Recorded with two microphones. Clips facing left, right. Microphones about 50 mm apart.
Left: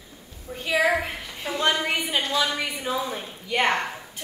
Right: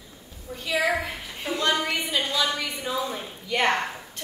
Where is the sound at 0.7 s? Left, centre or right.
Left.